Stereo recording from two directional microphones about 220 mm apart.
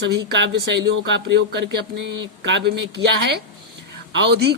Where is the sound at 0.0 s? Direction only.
50° right (ahead or behind).